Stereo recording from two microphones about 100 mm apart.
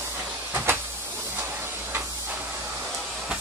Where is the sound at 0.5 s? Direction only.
25° right (ahead or behind).